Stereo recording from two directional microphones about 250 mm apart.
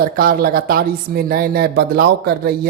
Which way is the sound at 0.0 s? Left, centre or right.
Right.